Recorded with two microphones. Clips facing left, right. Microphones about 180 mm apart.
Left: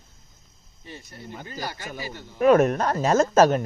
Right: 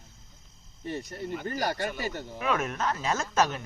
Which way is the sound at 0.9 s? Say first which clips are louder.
Right 7 dB; 50° right (ahead or behind).